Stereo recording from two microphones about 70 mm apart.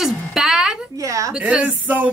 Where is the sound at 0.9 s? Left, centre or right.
Right.